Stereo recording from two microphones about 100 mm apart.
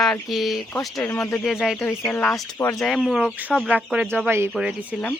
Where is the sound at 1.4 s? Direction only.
5° right (ahead or behind).